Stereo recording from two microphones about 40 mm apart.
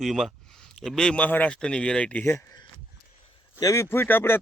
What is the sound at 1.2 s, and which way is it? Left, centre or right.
Speech, left.